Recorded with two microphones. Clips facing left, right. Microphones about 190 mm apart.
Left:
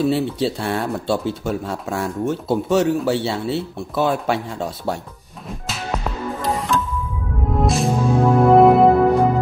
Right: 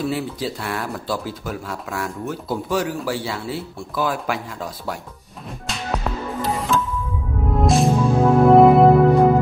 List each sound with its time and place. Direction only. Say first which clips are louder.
0.0 s speech: left 5 dB; 25° left (ahead or behind)
6.4 s music: even; centre (ahead or behind)